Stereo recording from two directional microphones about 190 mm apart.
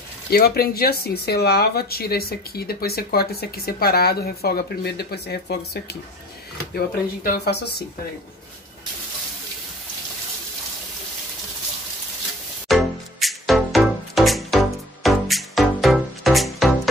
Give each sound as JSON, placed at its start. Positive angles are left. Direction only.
{"t": 0.3, "sound": "speech", "side_deg": 55}
{"t": 12.6, "sound": "music", "side_deg": 0}